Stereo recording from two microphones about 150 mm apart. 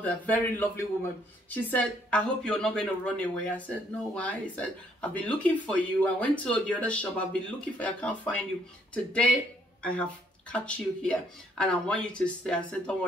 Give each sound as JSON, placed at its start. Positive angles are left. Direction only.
{"t": 0.0, "sound": "a woman's voice", "side_deg": 10}